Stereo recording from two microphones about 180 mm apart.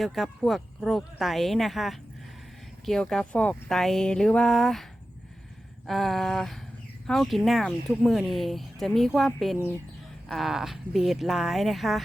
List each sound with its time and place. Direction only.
0.0 s speech: centre (ahead or behind)